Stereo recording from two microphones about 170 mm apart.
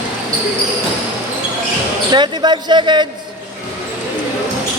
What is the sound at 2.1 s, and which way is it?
Speech, 25° right (ahead or behind).